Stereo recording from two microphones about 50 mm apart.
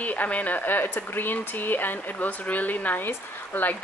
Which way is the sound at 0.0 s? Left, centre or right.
Left.